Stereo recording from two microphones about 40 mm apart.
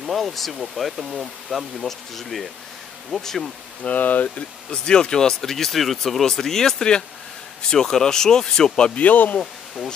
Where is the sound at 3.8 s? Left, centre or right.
Left.